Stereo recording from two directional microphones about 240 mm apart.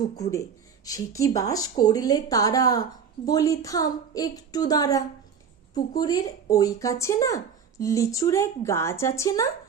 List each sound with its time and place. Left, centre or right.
0.2 s speech: centre